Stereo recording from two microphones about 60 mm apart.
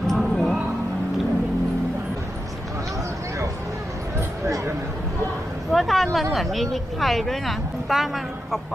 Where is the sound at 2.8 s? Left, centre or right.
Right.